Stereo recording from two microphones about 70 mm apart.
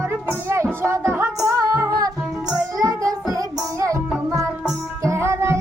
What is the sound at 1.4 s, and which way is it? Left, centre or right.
Music, right.